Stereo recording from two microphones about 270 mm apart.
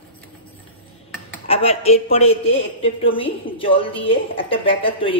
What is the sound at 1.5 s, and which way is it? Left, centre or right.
Speech, left.